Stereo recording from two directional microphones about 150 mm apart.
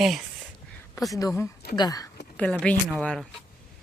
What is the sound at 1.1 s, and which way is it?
Speech, 20° left (ahead or behind).